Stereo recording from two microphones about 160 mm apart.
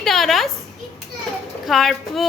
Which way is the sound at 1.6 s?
Centre (ahead or behind).